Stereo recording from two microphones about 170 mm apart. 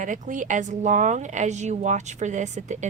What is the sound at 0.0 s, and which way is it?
Speech, 50° right (ahead or behind).